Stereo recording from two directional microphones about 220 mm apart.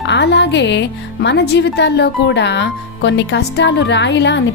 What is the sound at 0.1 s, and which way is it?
Speech, 50° left (ahead or behind).